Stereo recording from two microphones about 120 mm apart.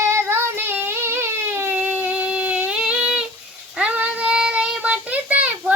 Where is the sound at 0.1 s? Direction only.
20° right (ahead or behind).